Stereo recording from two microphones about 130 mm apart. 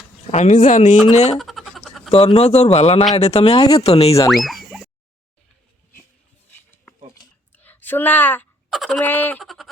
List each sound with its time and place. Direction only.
0.3 s speech: 65° left (ahead or behind)
1.1 s speech: 55° left (ahead or behind)
1.4 s a sound: centre (ahead or behind)
2.0 s speech: 45° left (ahead or behind)
3.6 s speech: 30° left (ahead or behind)
3.8 s speech: 50° left (ahead or behind)
4.3 s boing: centre (ahead or behind)
7.5 s a sound: 15° left (ahead or behind)
8.7 s speech: centre (ahead or behind)
9.0 s a sound: 15° left (ahead or behind)
9.4 s speech: centre (ahead or behind)